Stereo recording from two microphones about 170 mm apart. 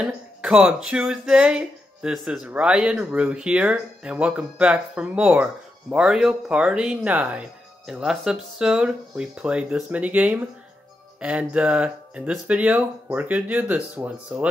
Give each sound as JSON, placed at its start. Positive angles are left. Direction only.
{"t": 0.0, "sound": "speech", "side_deg": -5}